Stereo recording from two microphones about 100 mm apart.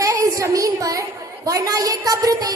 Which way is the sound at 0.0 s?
35° right (ahead or behind).